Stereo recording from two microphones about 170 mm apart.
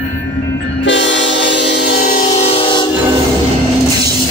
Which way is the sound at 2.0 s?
50° left (ahead or behind).